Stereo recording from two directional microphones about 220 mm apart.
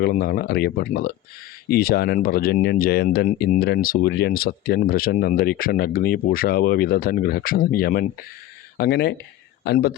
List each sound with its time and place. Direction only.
0.0 s speech: 45° left (ahead or behind)